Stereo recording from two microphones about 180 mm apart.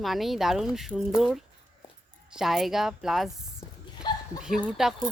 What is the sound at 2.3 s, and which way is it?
Speech, centre (ahead or behind).